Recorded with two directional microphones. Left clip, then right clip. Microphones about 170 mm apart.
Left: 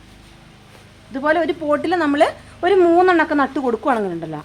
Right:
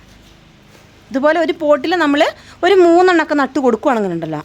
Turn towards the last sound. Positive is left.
turn(degrees=-90)